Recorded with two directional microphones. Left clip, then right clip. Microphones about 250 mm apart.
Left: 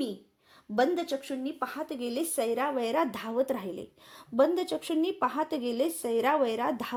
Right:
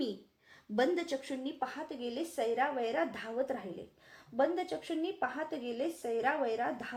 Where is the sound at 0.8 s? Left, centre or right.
Left.